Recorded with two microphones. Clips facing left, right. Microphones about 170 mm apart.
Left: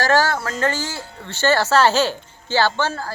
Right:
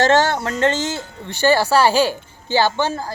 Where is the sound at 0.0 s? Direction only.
25° right (ahead or behind).